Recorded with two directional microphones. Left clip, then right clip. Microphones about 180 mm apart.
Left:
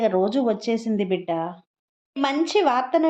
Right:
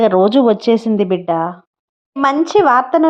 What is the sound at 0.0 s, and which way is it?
Speech, 50° right (ahead or behind).